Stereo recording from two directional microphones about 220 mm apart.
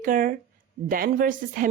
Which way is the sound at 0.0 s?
35° right (ahead or behind).